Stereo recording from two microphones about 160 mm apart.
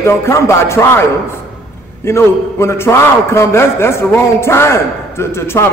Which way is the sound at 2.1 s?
15° left (ahead or behind).